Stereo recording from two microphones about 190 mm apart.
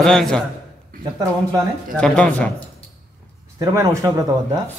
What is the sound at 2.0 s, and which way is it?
Speech, 5° left (ahead or behind).